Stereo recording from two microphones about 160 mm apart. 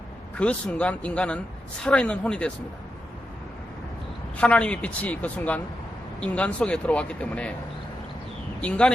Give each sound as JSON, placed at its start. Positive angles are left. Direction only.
{"t": 0.3, "sound": "speech", "side_deg": 10}
{"t": 4.4, "sound": "speech", "side_deg": 5}
{"t": 8.6, "sound": "speech", "side_deg": 5}